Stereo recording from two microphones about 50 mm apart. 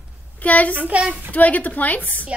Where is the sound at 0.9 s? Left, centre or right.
Right.